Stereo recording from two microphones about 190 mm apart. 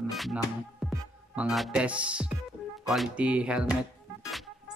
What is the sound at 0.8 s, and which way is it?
Music, centre (ahead or behind).